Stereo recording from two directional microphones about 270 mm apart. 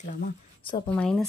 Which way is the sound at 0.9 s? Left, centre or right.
Centre.